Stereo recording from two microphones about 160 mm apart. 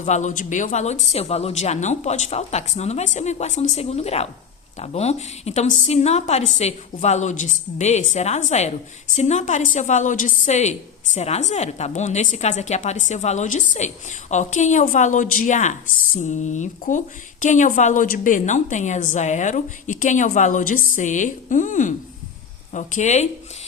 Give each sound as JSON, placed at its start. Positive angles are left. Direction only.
{"t": 0.0, "sound": "a woman's voice", "side_deg": 50}